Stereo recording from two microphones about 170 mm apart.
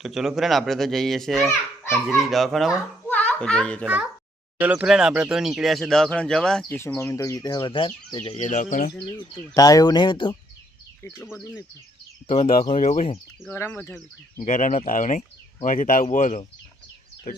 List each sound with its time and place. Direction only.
0.0 s speech: centre (ahead or behind)
3.1 s a sound: 10° left (ahead or behind)
3.8 s a child's voice: 10° right (ahead or behind)
6.7 s speech: 15° left (ahead or behind)
8.4 s speech: 50° left (ahead or behind)
9.3 s speech: 20° left (ahead or behind)
11.2 s speech: centre (ahead or behind)
12.6 s speech: 40° left (ahead or behind)
13.5 s speech: 15° left (ahead or behind)
14.4 s speech: 45° left (ahead or behind)